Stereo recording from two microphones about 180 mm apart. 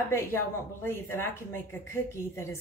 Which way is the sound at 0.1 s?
15° left (ahead or behind).